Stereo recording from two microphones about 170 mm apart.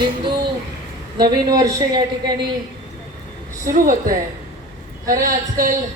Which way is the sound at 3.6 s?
55° right (ahead or behind).